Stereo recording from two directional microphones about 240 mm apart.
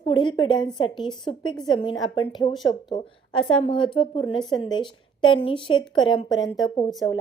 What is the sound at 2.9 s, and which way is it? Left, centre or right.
A woman's voice, centre.